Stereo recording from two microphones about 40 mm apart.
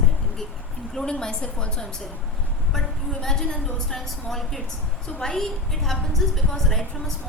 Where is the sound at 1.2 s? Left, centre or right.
Centre.